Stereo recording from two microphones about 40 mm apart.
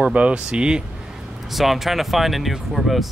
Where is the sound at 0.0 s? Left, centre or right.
Right.